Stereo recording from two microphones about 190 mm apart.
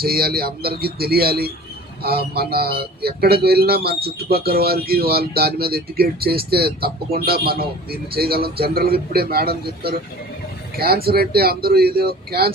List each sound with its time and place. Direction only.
0.0 s speech: 50° right (ahead or behind)